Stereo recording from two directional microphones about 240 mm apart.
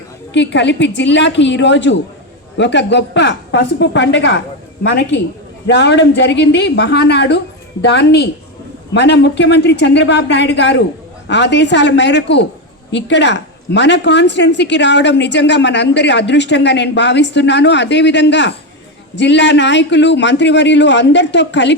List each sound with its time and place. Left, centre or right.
0.3 s a woman's voice: left